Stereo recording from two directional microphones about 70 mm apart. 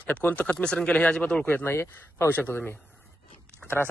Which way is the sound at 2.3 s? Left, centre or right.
Left.